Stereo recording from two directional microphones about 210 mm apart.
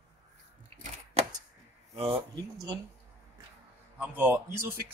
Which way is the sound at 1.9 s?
30° right (ahead or behind).